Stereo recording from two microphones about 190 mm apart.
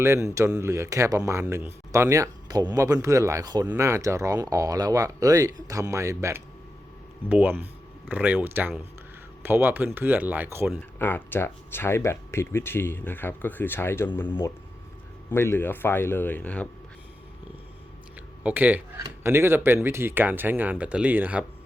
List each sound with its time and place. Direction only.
0.0 s speech: 15° right (ahead or behind)
11.0 s speech: 10° left (ahead or behind)
18.4 s speech: 10° right (ahead or behind)